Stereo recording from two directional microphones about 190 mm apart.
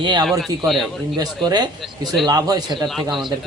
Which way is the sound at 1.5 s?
20° right (ahead or behind).